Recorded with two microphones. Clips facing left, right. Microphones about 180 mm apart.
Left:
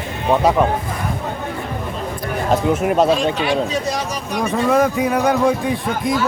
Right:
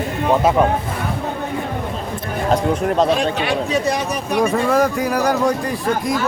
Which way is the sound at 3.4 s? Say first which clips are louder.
Even; 60° right (ahead or behind).